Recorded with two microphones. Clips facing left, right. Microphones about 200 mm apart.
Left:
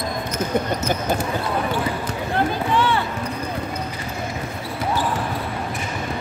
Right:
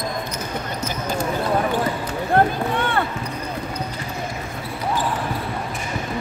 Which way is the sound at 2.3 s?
55° right (ahead or behind).